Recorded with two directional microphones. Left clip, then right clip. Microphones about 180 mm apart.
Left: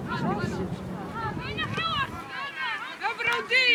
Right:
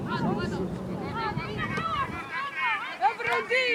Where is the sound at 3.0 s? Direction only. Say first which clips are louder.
Right 1 dB; 15° left (ahead or behind).